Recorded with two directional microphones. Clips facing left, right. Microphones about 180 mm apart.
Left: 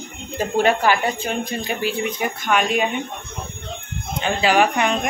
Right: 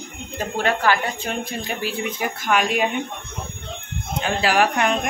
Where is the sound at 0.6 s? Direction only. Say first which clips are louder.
Left 3 dB; 15° left (ahead or behind).